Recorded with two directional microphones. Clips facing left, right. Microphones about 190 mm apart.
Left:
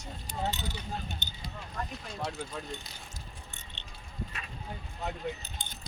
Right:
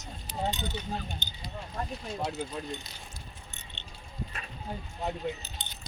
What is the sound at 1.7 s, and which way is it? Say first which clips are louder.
Speech: right 3 dB; 20° right (ahead or behind).